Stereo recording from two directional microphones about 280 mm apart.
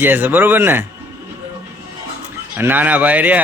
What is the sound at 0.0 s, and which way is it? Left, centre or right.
Speech, centre.